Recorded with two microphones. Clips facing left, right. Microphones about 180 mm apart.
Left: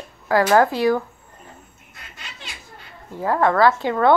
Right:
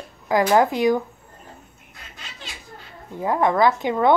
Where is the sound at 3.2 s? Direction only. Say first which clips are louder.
Left 1 dB; 15° right (ahead or behind).